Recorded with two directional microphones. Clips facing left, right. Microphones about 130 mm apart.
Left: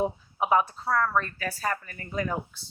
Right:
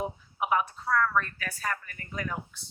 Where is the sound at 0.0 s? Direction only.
30° left (ahead or behind).